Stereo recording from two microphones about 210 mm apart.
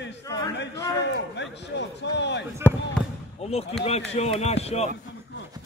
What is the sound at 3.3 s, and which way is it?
Speech, 30° left (ahead or behind).